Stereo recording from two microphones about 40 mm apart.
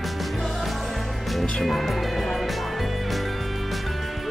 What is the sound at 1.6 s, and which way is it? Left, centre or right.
Speech, centre.